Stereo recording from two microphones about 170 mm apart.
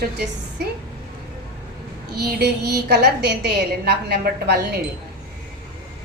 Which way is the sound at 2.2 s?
70° right (ahead or behind).